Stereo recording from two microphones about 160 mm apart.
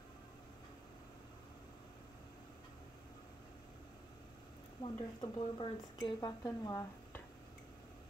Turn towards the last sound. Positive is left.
turn(degrees=20)  # may be behind; listen again after turning